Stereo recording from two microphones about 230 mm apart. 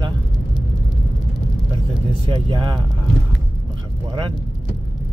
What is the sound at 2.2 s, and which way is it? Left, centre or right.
Speech, right.